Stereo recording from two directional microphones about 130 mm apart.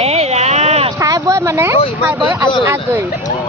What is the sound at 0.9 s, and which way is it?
Speech, 25° right (ahead or behind).